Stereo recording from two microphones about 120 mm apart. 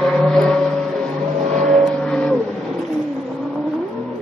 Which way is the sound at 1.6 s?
Centre (ahead or behind).